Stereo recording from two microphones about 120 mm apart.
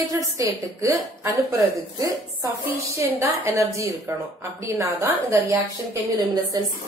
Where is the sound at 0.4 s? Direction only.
30° right (ahead or behind).